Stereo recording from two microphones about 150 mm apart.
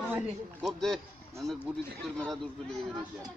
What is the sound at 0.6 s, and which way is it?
Speech, centre (ahead or behind).